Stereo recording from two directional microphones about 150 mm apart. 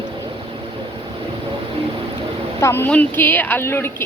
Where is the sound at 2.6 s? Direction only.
15° left (ahead or behind).